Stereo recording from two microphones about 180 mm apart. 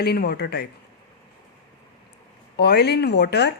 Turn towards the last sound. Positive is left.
turn(degrees=70)  # may be behind; listen again after turning